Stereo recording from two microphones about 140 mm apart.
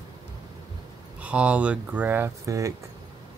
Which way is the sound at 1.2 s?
10° right (ahead or behind).